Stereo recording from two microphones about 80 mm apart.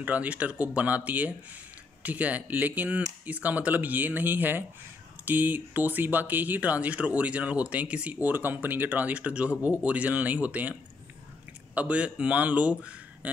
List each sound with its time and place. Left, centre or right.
0.0 s speech: centre
11.7 s a man's voice: centre